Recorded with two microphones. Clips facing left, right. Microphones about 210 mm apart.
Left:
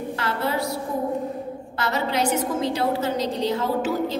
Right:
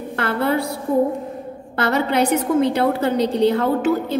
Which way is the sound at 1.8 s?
60° right (ahead or behind).